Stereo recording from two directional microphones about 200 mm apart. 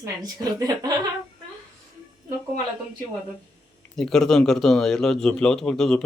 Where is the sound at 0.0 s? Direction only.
20° right (ahead or behind).